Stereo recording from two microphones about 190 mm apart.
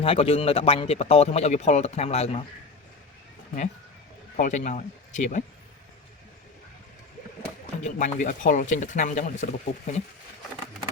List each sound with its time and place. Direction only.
0.0 s speech: 30° left (ahead or behind)
4.4 s speech: 40° left (ahead or behind)
7.9 s speech: 40° left (ahead or behind)